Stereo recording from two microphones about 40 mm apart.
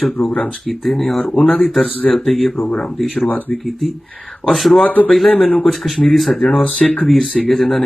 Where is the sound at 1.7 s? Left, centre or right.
Centre.